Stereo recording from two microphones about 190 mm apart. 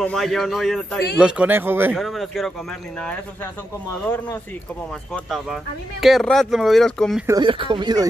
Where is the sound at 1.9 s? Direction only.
Centre (ahead or behind).